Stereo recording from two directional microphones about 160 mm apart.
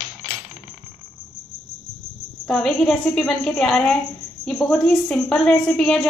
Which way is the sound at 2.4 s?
5° left (ahead or behind).